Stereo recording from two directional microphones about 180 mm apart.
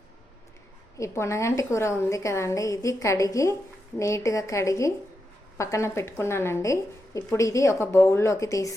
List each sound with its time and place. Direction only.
0.9 s a woman's voice: 15° left (ahead or behind)